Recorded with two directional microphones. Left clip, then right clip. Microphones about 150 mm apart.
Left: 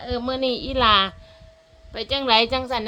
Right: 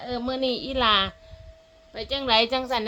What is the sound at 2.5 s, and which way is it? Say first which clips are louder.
Speech: left 1 dB; centre (ahead or behind).